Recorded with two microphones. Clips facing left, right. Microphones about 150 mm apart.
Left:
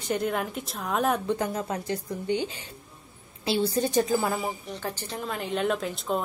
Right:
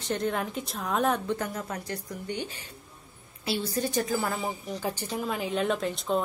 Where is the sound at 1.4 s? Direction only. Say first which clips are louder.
Left 4 dB; 25° left (ahead or behind).